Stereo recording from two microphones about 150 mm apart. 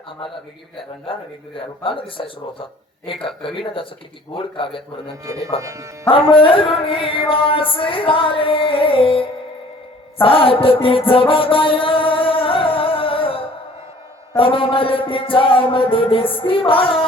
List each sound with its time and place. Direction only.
1.5 s music: 35° left (ahead or behind)
5.2 s speech: 20° right (ahead or behind)
6.1 s music: 35° left (ahead or behind)